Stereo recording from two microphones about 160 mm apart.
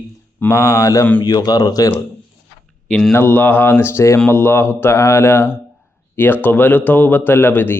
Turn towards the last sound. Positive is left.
turn(degrees=15)  # may be behind; listen again after turning